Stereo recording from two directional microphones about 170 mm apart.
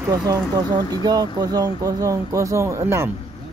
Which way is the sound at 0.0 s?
20° right (ahead or behind).